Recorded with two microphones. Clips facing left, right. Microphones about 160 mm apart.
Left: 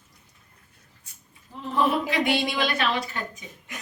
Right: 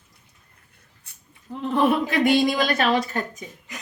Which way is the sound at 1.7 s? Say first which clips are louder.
Right 3 dB; 55° right (ahead or behind).